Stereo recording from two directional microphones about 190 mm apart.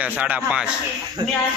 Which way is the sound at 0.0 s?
5° right (ahead or behind).